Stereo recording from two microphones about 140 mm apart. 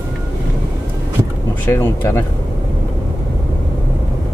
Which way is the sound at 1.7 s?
20° left (ahead or behind).